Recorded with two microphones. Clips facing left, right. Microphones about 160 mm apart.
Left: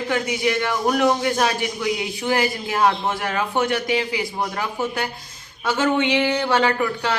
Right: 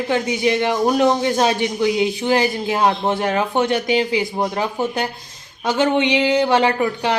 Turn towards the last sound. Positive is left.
turn(degrees=-20)  # may be behind; listen again after turning